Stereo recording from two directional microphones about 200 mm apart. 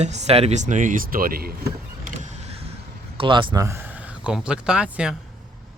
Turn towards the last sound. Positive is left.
turn(degrees=-5)  # may be behind; listen again after turning